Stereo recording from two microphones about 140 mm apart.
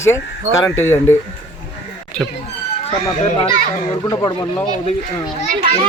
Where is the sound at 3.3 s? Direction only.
35° left (ahead or behind).